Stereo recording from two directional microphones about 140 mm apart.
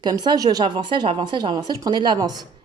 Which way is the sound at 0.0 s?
30° right (ahead or behind).